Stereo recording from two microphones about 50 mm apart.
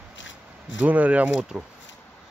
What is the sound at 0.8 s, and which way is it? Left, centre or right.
Speech, right.